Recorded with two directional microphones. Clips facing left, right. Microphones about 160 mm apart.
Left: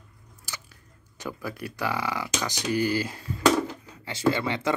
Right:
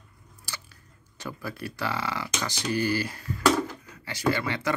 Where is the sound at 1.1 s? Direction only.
15° left (ahead or behind).